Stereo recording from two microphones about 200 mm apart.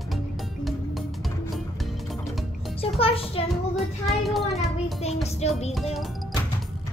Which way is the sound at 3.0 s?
30° left (ahead or behind).